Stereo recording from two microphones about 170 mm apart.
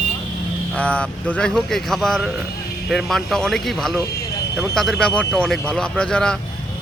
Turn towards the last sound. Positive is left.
turn(degrees=5)  # may be behind; listen again after turning